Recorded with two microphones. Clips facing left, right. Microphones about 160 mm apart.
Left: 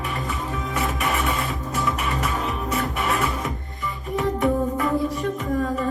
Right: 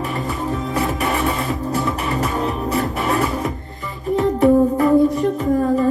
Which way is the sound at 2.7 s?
35° right (ahead or behind).